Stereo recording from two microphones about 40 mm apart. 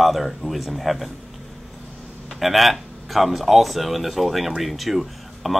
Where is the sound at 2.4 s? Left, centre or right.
Centre.